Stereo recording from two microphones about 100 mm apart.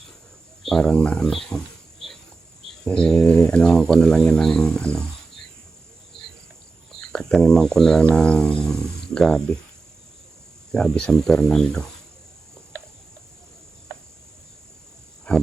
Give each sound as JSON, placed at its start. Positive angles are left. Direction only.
{"t": 0.6, "sound": "speech", "side_deg": 5}
{"t": 6.1, "sound": "cricket", "side_deg": 65}
{"t": 7.0, "sound": "speech", "side_deg": 5}
{"t": 10.7, "sound": "speech", "side_deg": 5}
{"t": 15.3, "sound": "a sound", "side_deg": 10}